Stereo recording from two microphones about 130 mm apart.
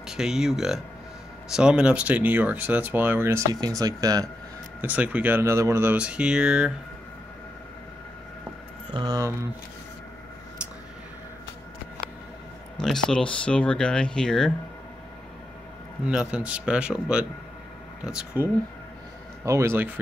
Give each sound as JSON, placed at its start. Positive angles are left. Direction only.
{"t": 0.0, "sound": "speech", "side_deg": -5}
{"t": 4.8, "sound": "speech", "side_deg": -10}
{"t": 8.9, "sound": "speech", "side_deg": -30}
{"t": 12.7, "sound": "speech", "side_deg": 5}
{"t": 16.1, "sound": "speech", "side_deg": -5}
{"t": 19.4, "sound": "speech", "side_deg": -20}